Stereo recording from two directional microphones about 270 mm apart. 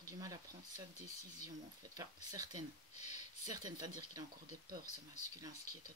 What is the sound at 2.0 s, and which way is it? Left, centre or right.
Speech, centre.